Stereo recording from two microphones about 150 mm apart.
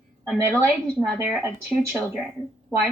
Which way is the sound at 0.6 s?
15° right (ahead or behind).